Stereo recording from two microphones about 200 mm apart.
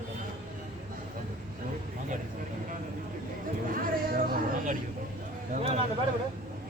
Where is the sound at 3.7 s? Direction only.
45° right (ahead or behind).